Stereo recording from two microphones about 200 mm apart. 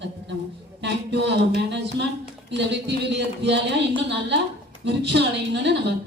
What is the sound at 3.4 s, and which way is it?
A woman's voice, 60° right (ahead or behind).